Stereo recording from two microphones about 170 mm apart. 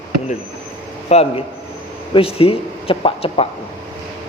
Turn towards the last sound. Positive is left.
turn(degrees=35)  # may be behind; listen again after turning